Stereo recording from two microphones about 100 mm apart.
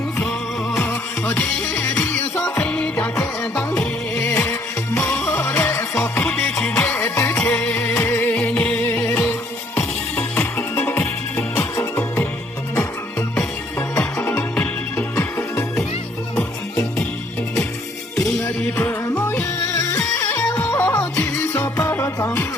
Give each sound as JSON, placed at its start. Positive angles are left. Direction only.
{"t": 0.8, "sound": "music", "side_deg": 25}
{"t": 2.6, "sound": "music", "side_deg": 15}
{"t": 5.0, "sound": "music", "side_deg": 25}
{"t": 15.1, "sound": "music", "side_deg": 25}
{"t": 18.6, "sound": "music", "side_deg": 15}